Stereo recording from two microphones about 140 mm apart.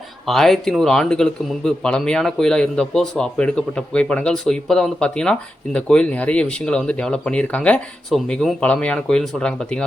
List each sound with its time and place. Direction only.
0.3 s speech: centre (ahead or behind)